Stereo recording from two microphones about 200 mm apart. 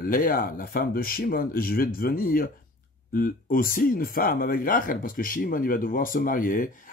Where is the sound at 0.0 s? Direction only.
45° left (ahead or behind).